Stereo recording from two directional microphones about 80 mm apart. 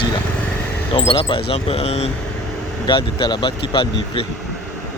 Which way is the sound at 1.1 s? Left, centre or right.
Left.